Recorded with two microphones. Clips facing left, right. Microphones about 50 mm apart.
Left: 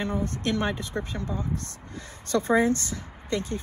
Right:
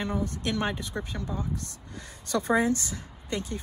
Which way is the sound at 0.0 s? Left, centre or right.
Left.